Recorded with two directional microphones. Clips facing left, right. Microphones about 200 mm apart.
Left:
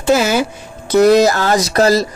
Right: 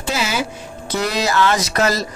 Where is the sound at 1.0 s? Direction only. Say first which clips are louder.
Left 9 dB; 45° left (ahead or behind).